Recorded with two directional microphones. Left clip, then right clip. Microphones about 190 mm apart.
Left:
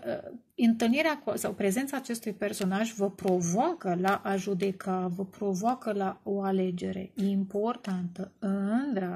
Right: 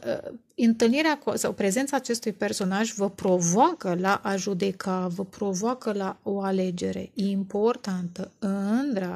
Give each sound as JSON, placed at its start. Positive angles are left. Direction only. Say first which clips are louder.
{"t": 0.0, "sound": "a woman's voice", "louder": "right 5 dB", "side_deg": -45}